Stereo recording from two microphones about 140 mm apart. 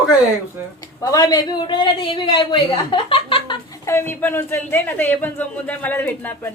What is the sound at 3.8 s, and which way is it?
A man's voice, 20° left (ahead or behind).